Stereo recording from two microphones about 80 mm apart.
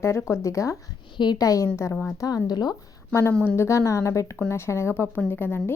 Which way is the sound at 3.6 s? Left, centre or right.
Left.